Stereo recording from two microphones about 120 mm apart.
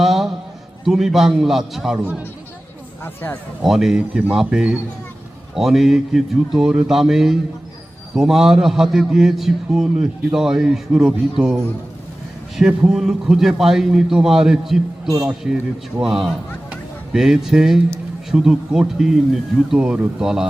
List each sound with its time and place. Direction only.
0.0 s a sound: centre (ahead or behind)
0.9 s a man's voice: 5° right (ahead or behind)
3.0 s speech: 15° left (ahead or behind)
3.6 s a man's voice: centre (ahead or behind)